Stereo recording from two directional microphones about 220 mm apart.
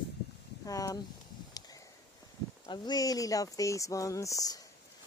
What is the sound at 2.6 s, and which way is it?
Speech, 20° left (ahead or behind).